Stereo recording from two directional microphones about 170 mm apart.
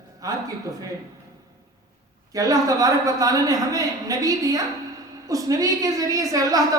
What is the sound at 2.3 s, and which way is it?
A woman's voice, 20° right (ahead or behind).